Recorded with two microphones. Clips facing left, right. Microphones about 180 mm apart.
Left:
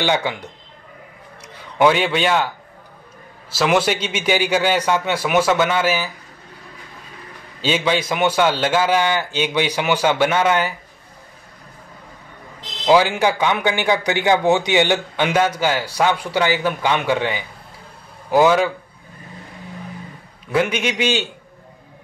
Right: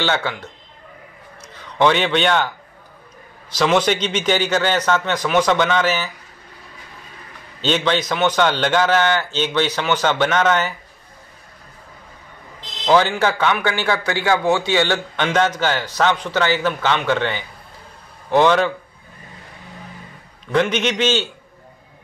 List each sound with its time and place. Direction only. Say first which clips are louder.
0.0 s a man's voice: left 2 dB; 15° left (ahead or behind)
1.8 s a man's voice: left 1 dB; 5° left (ahead or behind)
7.6 s a man's voice: even; 10° left (ahead or behind)
12.8 s a man's voice: left 1 dB; 10° left (ahead or behind)
20.5 s a man's voice: right 1 dB; 10° left (ahead or behind)